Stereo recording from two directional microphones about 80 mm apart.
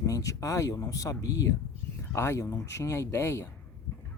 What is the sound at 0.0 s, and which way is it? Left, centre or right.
Speech, left.